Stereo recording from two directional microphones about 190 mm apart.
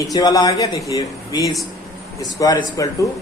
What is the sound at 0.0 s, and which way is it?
Speech, 20° left (ahead or behind).